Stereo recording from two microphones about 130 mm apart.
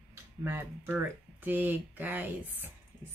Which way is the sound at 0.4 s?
15° right (ahead or behind).